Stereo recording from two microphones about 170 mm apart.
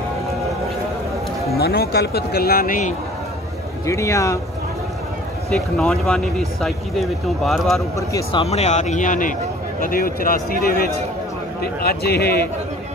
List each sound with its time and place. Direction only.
1.6 s speech: 65° left (ahead or behind)
3.8 s speech: 15° left (ahead or behind)
5.5 s speech: 5° left (ahead or behind)
8.3 s a man's voice: 35° left (ahead or behind); by 12.4 s 65° left (ahead or behind)